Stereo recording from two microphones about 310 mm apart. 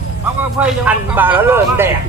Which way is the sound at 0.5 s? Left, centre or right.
Centre.